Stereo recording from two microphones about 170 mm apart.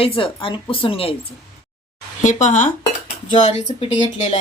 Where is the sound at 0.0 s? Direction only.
35° left (ahead or behind).